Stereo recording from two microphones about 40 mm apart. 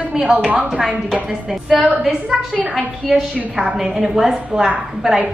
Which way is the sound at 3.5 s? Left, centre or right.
Right.